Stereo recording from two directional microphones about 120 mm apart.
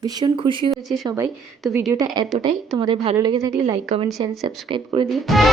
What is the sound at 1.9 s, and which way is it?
Speech, 30° right (ahead or behind).